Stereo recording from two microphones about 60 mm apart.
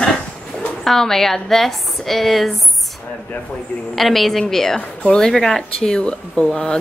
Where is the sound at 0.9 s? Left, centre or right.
Centre.